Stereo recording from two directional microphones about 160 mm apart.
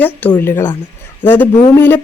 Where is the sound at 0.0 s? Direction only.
10° left (ahead or behind).